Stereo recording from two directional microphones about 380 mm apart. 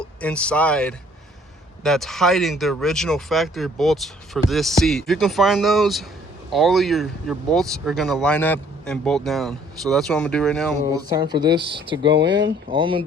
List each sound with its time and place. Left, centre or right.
0.0 s speech: centre
10.8 s speech: centre
12.1 s speech: right
12.7 s speech: centre